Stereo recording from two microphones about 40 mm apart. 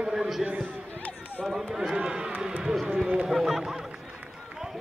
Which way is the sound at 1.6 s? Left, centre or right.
Centre.